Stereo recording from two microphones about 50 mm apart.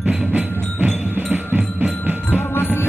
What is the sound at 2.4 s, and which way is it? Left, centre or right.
Music, left.